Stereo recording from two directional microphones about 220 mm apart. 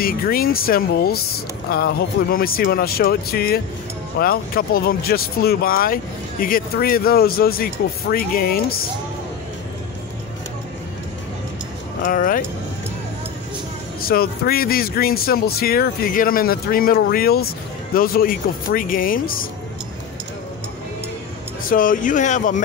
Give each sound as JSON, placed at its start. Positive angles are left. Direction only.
{"t": 0.0, "sound": "speech", "side_deg": 40}
{"t": 12.0, "sound": "speech", "side_deg": 40}
{"t": 14.0, "sound": "speech", "side_deg": 45}
{"t": 21.6, "sound": "speech", "side_deg": 40}